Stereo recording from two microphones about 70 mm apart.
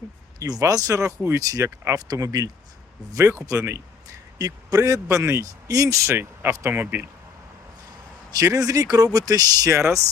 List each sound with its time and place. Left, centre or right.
0.3 s speech: right
0.6 s speech: right
5.0 s speech: right
6.1 s speech: right
8.3 s speech: right
9.7 s speech: right